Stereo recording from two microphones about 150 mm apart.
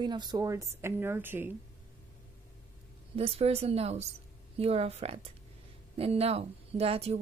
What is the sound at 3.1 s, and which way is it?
A woman's voice, 40° right (ahead or behind).